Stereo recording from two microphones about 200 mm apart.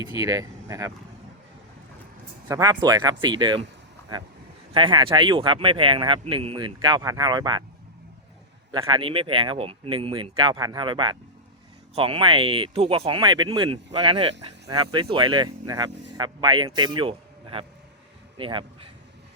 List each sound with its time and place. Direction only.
0.0 s speech: 20° right (ahead or behind)
2.5 s speech: 20° right (ahead or behind)
4.7 s speech: 25° right (ahead or behind)
8.7 s speech: 25° right (ahead or behind)